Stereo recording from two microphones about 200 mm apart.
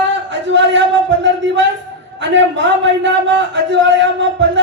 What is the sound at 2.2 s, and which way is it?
A man's voice, 65° right (ahead or behind).